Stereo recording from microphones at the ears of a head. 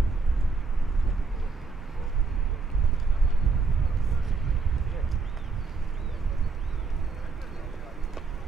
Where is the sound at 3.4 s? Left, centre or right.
Right.